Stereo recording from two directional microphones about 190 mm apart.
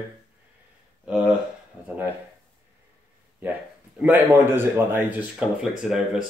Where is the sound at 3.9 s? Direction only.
10° right (ahead or behind).